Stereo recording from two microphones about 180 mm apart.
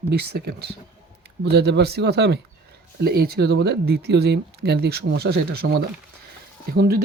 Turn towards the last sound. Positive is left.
turn(degrees=-55)  # may be behind; listen again after turning